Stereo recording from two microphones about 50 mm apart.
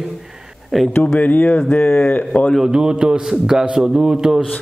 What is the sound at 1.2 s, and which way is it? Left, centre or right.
Speech, left.